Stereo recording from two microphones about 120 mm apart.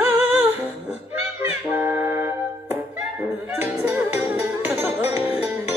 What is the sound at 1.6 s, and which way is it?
Music, 20° right (ahead or behind).